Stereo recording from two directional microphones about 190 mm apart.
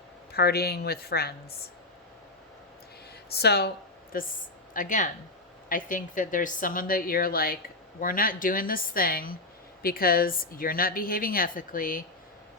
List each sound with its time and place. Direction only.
0.3 s speech: 55° left (ahead or behind)
3.2 s a woman's voice: 55° left (ahead or behind)